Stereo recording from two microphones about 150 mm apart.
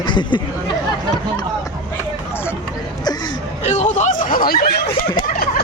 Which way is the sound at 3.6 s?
50° left (ahead or behind).